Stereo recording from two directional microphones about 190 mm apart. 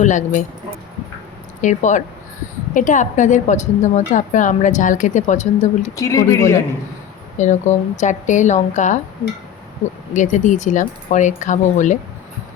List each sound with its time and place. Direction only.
0.0 s speech: 40° left (ahead or behind)
1.6 s a woman's voice: 40° left (ahead or behind)
6.0 s speech: 15° left (ahead or behind)
7.3 s a woman's voice: 40° left (ahead or behind)
10.2 s a woman's voice: 40° left (ahead or behind)